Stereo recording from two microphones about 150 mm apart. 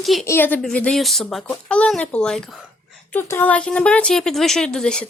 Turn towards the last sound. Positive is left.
turn(degrees=5)  # may be behind; listen again after turning